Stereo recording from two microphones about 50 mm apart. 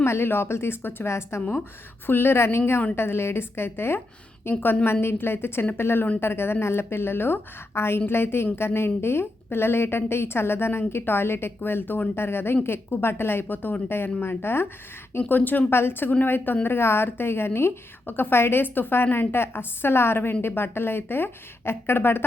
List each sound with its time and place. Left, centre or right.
0.0 s a woman's voice: left
1.0 s a woman's voice: left
1.4 s a woman's voice: left
2.0 s a woman's voice: left
4.6 s a woman's voice: left
15.3 s a woman's voice: left
15.7 s a woman's voice: left